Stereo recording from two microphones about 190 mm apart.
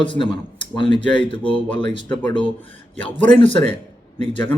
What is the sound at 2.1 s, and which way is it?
Speech, 10° left (ahead or behind).